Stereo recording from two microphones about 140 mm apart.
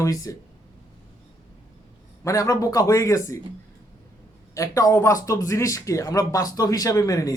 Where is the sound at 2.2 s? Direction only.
20° left (ahead or behind).